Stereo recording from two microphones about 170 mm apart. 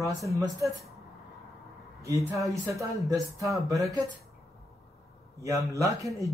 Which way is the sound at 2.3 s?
20° right (ahead or behind).